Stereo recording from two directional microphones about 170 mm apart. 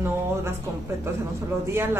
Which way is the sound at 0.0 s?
15° right (ahead or behind).